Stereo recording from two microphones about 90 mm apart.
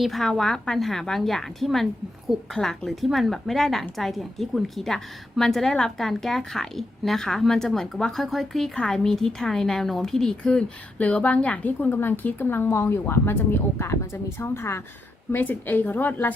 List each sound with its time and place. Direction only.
0.0 s a woman's voice: centre (ahead or behind); by 16.3 s 20° left (ahead or behind)